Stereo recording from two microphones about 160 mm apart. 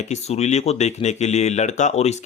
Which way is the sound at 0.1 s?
45° left (ahead or behind).